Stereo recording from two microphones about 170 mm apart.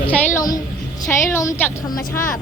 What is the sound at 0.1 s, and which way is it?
A woman's voice, 20° left (ahead or behind).